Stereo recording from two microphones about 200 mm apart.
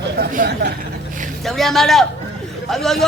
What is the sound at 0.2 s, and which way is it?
Speech, 50° right (ahead or behind).